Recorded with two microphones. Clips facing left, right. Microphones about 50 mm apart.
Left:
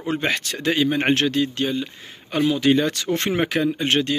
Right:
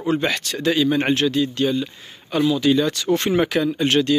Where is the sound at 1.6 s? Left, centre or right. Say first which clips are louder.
Right 3 dB; left.